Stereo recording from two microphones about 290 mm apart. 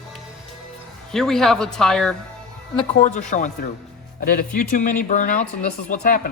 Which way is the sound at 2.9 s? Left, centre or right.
Left.